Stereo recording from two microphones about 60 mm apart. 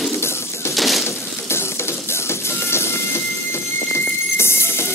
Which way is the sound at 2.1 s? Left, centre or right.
Left.